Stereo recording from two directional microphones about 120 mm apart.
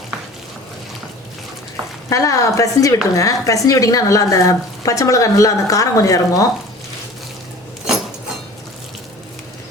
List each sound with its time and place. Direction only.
2.0 s speech: 25° left (ahead or behind)